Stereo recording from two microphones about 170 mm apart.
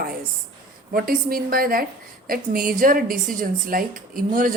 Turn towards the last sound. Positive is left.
turn(degrees=-55)  # may be behind; listen again after turning